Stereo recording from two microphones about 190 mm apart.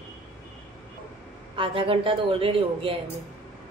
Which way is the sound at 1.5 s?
25° right (ahead or behind).